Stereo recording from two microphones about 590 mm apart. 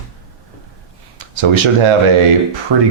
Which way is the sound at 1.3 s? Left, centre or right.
Right.